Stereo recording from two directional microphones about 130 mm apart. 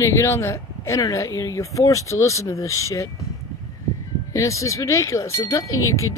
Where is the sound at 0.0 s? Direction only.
20° left (ahead or behind).